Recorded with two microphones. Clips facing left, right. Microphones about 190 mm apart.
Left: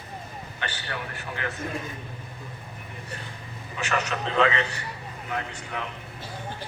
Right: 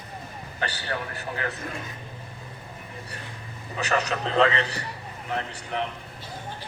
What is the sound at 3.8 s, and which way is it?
A man's voice, 35° right (ahead or behind).